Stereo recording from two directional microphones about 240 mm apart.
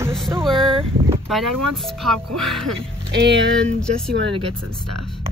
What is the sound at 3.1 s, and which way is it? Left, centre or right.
Music, right.